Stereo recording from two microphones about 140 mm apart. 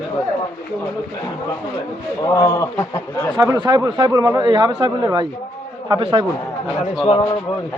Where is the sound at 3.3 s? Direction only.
25° right (ahead or behind).